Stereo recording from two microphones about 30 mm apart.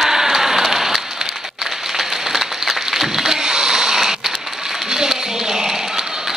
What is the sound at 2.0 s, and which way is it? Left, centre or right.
Applause, centre.